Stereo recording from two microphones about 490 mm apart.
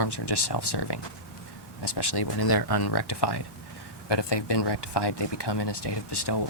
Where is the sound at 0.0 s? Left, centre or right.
Left.